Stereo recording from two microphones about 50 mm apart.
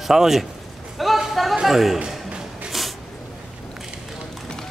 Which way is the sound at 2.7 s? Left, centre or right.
Centre.